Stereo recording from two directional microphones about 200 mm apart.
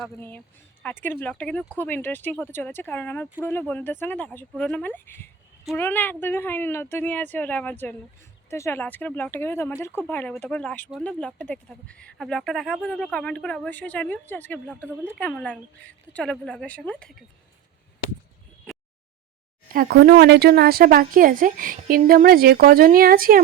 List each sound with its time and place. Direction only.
0.0 s speech: 10° left (ahead or behind)
19.7 s a woman's voice: 50° right (ahead or behind)